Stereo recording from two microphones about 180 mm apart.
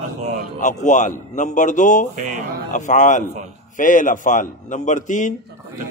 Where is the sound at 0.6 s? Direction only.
45° left (ahead or behind).